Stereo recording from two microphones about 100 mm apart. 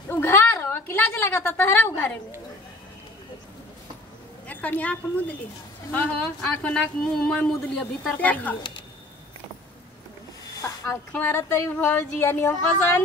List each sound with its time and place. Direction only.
0.1 s a sound: 25° left (ahead or behind)
4.5 s a woman's voice: 15° left (ahead or behind)
10.4 s snake: 35° left (ahead or behind)
11.2 s speech: 25° left (ahead or behind)